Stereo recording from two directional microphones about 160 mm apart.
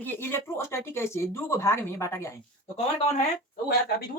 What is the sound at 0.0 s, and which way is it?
Speech, 15° left (ahead or behind).